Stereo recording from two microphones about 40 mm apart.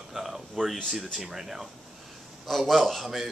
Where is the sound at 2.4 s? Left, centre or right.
Centre.